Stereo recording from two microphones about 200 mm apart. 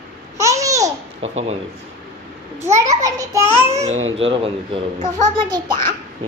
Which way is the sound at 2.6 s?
15° right (ahead or behind).